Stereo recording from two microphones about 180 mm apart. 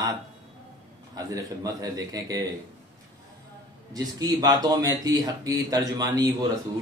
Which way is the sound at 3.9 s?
20° right (ahead or behind).